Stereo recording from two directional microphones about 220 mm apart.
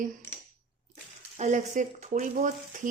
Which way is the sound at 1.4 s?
35° right (ahead or behind).